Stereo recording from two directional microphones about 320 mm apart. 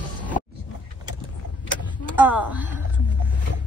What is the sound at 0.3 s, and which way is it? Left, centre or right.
Vehicle, left.